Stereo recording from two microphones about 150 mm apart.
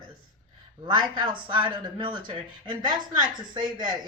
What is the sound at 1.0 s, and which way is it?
A woman's voice, 35° right (ahead or behind).